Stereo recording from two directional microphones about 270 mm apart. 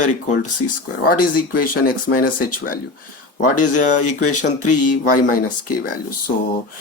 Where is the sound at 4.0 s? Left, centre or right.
Left.